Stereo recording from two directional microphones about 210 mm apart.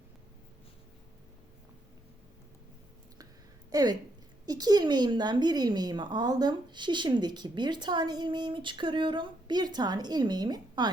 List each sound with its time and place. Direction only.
3.7 s a woman's voice: 15° right (ahead or behind)